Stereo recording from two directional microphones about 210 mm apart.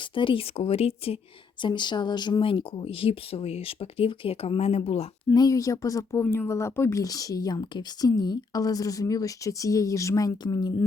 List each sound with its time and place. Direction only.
0.1 s speech: 25° left (ahead or behind)